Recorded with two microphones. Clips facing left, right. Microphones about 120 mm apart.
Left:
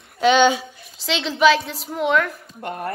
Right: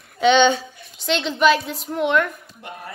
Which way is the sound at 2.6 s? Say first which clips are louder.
Left 8 dB; 50° left (ahead or behind).